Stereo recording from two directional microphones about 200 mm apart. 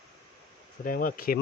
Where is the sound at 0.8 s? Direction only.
40° left (ahead or behind).